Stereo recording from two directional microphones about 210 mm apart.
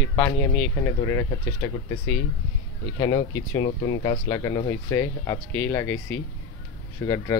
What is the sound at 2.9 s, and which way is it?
Speech, 20° left (ahead or behind).